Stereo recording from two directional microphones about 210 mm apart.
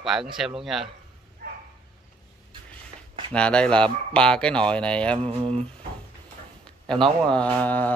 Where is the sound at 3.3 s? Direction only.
5° left (ahead or behind).